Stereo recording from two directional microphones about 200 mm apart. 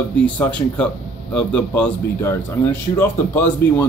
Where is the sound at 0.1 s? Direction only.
5° left (ahead or behind).